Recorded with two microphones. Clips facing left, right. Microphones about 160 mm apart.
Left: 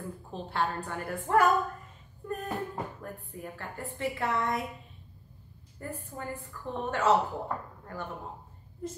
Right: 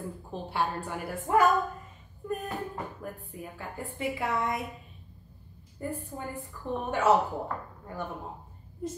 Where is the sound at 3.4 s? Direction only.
10° right (ahead or behind).